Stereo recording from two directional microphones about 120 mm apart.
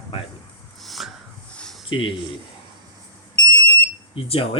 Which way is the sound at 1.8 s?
45° left (ahead or behind).